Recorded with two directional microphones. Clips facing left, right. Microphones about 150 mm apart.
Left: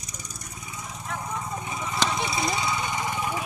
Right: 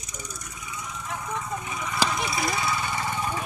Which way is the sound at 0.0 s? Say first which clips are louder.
Right 2 dB; 35° left (ahead or behind).